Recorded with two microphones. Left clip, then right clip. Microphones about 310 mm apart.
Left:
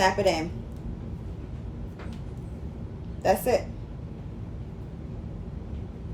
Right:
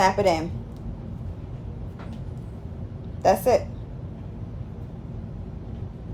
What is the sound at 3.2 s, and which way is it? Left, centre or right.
Speech, centre.